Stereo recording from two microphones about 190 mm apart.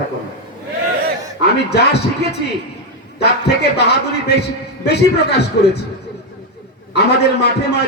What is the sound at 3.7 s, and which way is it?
A man's voice, 60° left (ahead or behind).